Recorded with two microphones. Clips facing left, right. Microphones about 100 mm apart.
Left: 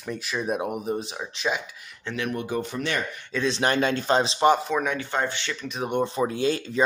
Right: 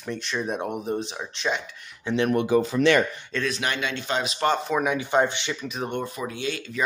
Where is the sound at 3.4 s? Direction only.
35° left (ahead or behind).